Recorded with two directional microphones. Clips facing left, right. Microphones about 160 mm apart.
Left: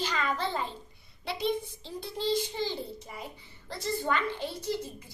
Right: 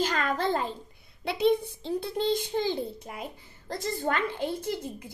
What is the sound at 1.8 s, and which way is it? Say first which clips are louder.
A child's voice: right 5 dB; 55° right (ahead or behind).